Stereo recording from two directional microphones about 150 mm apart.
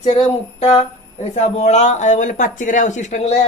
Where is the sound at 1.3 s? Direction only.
50° left (ahead or behind).